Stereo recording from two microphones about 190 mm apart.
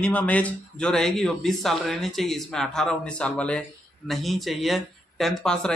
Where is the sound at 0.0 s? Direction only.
5° left (ahead or behind).